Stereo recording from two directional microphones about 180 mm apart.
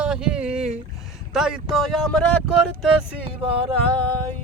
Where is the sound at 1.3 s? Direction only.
5° right (ahead or behind).